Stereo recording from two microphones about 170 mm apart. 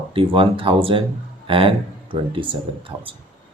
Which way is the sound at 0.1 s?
30° right (ahead or behind).